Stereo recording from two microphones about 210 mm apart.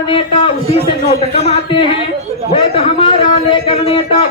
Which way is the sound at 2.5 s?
25° left (ahead or behind).